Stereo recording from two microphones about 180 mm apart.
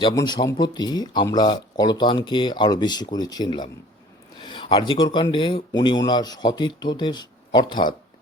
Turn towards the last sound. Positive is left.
turn(degrees=25)  # may be behind; listen again after turning